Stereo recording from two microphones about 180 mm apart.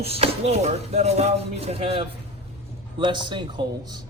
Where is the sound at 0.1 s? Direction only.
35° right (ahead or behind).